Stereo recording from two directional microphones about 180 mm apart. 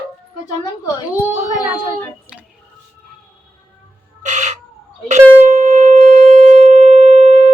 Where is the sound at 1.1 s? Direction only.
10° right (ahead or behind).